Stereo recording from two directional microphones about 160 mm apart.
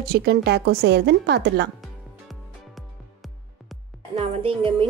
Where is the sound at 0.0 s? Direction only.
80° right.